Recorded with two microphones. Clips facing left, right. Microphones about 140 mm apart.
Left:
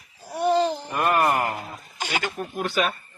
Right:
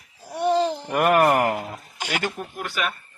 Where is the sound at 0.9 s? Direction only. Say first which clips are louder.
Right 7 dB; 80° right.